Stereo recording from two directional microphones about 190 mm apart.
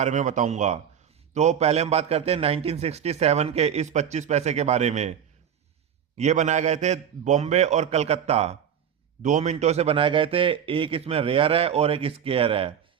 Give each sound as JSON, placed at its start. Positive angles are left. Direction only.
{"t": 0.0, "sound": "a man's voice", "side_deg": -40}
{"t": 6.1, "sound": "a man's voice", "side_deg": -35}